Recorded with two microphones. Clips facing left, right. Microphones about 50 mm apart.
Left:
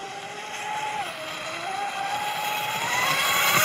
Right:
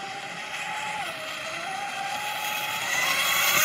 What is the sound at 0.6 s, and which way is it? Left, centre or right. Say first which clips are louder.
Vehicle: left 3 dB; centre.